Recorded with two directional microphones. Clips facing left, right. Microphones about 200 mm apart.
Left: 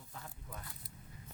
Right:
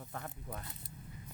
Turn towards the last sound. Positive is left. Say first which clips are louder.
# right 6 dB
turn(degrees=-60)  # may be behind; listen again after turning